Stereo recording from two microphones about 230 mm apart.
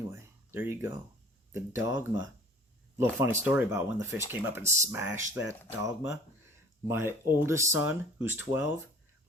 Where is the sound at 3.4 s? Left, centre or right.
Centre.